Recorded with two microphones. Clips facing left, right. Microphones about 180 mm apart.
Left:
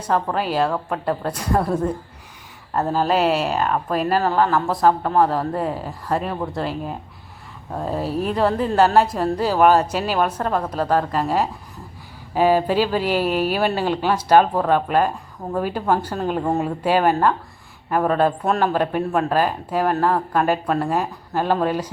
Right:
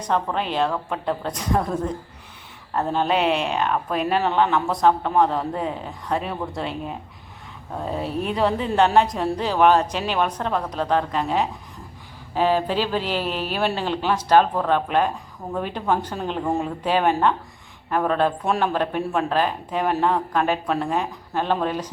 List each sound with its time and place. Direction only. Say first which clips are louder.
0.0 s speech: left 2 dB; 5° left (ahead or behind)